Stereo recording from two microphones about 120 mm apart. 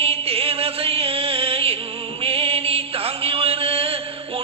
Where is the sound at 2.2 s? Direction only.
55° right (ahead or behind).